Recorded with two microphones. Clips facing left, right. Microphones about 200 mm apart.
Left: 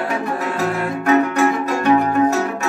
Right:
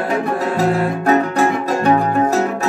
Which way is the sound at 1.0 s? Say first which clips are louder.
Left 1 dB; 35° right (ahead or behind).